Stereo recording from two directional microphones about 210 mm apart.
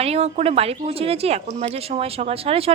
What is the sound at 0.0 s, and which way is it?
A woman's voice, 30° right (ahead or behind).